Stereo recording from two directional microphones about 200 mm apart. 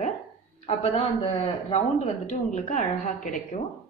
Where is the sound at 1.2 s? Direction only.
30° left (ahead or behind).